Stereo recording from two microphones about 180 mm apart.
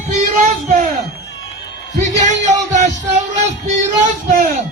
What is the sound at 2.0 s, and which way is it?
Music, 40° right (ahead or behind).